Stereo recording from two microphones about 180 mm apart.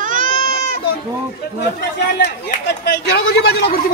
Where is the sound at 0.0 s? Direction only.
45° right (ahead or behind).